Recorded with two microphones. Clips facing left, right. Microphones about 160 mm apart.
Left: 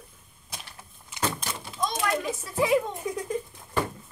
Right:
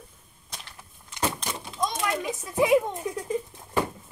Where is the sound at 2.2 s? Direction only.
20° right (ahead or behind).